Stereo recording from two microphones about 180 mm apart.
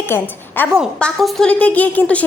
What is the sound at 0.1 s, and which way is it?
A woman's voice, 10° left (ahead or behind).